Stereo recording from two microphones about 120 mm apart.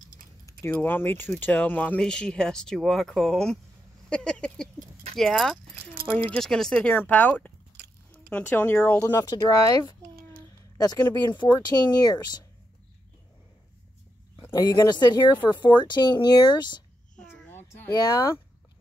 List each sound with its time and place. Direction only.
0.5 s speech: 20° left (ahead or behind)
9.1 s speech: 30° left (ahead or behind)
11.2 s speech: 40° left (ahead or behind)
14.5 s speech: 30° left (ahead or behind)
17.6 s a sound: 30° left (ahead or behind)